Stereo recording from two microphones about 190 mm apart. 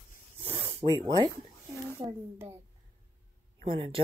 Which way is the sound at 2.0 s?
15° right (ahead or behind).